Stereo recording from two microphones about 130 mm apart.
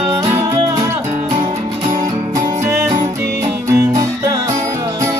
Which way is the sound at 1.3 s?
40° right (ahead or behind).